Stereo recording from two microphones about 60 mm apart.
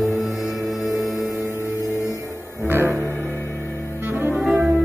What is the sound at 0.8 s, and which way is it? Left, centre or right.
Music, left.